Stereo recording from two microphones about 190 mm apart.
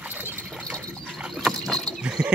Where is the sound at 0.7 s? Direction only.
5° right (ahead or behind).